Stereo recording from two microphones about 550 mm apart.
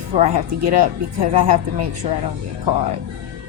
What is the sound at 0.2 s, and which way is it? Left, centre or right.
Speech, right.